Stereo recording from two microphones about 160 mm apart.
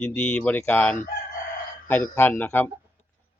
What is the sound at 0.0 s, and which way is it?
Speech, 10° left (ahead or behind).